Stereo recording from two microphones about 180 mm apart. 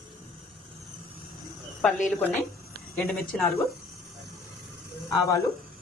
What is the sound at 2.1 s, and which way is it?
Speech, 10° left (ahead or behind).